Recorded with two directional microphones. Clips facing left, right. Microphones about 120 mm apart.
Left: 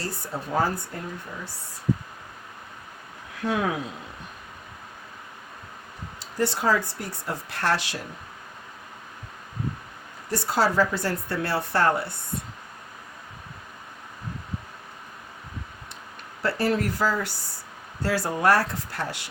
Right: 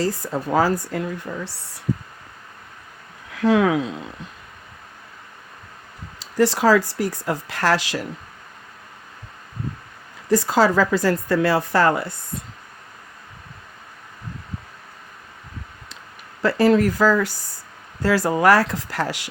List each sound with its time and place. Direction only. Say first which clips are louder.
0.0 s speech: right 9 dB; 90° right
3.4 s speech: right 9 dB; 90° right
6.1 s speech: right 7 dB; 90° right
10.2 s speech: right 7 dB; 90° right
16.4 s speech: right 8 dB; 90° right